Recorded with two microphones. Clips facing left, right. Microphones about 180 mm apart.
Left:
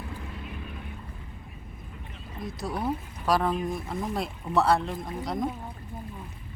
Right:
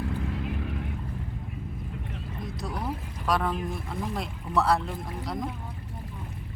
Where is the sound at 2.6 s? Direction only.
5° left (ahead or behind).